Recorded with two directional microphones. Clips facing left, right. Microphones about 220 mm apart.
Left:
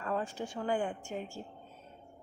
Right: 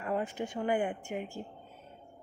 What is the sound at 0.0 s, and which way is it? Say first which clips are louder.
Speech: right 2 dB; 15° right (ahead or behind).